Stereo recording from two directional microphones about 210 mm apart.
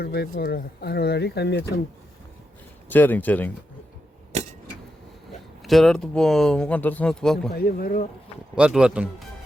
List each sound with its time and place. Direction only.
0.0 s speech: 50° left (ahead or behind)
2.9 s speech: 10° left (ahead or behind)
4.3 s a sound: 35° right (ahead or behind)
5.6 s speech: centre (ahead or behind)
7.5 s speech: 45° left (ahead or behind)
8.5 s speech: 5° right (ahead or behind)